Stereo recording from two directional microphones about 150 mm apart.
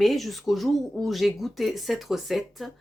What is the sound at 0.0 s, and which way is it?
Speech, centre (ahead or behind).